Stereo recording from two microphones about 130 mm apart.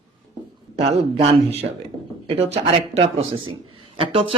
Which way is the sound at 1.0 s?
50° right (ahead or behind).